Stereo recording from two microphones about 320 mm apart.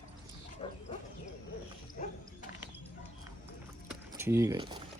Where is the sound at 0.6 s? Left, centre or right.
Centre.